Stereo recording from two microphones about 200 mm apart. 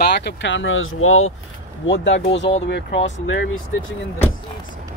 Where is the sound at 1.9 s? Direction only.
65° left (ahead or behind).